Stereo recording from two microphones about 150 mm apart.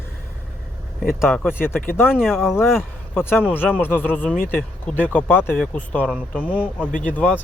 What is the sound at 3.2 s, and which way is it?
Speech, 15° left (ahead or behind).